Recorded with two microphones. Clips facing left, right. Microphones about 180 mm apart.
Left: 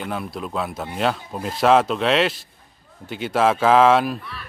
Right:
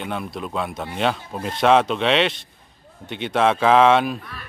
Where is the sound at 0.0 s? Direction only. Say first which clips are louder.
Even; centre (ahead or behind).